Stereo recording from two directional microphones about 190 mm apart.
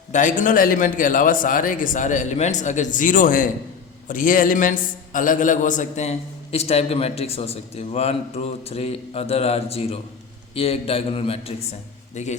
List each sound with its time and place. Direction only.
0.1 s a man's voice: 45° left (ahead or behind)